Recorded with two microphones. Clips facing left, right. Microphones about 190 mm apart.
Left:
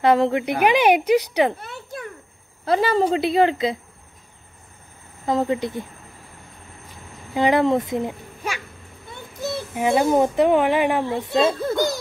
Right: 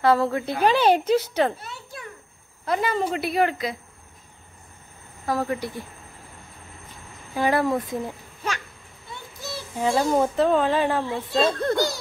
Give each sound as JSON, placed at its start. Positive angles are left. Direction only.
{"t": 0.0, "sound": "speech", "side_deg": 20}
{"t": 1.6, "sound": "a child's voice", "side_deg": 55}
{"t": 2.6, "sound": "speech", "side_deg": 30}
{"t": 5.2, "sound": "speech", "side_deg": 20}
{"t": 7.3, "sound": "speech", "side_deg": 20}
{"t": 9.8, "sound": "speech", "side_deg": 15}
{"t": 11.4, "sound": "speech", "side_deg": 5}